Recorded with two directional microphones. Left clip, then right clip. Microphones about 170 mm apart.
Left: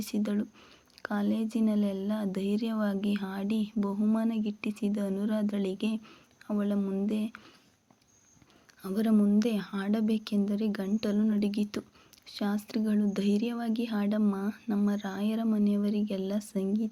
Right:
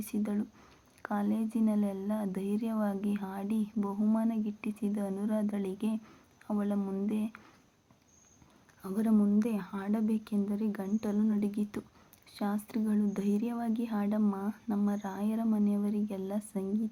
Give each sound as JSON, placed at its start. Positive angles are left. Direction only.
{"t": 0.0, "sound": "speech", "side_deg": 20}
{"t": 8.8, "sound": "speech", "side_deg": 20}